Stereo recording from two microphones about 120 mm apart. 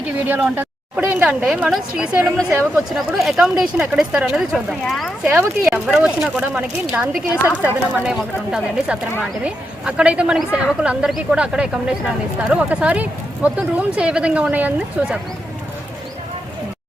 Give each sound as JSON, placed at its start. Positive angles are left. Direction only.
{"t": 0.5, "sound": "speech", "side_deg": -15}
{"t": 2.7, "sound": "speech", "side_deg": -5}